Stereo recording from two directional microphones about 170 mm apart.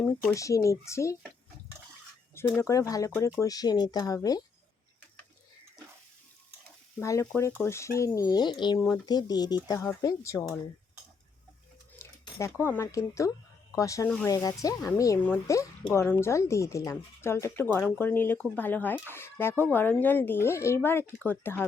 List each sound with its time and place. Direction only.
0.3 s speech: 20° left (ahead or behind)
2.6 s speech: 20° left (ahead or behind)
7.0 s speech: 15° left (ahead or behind)
11.9 s speech: 15° left (ahead or behind)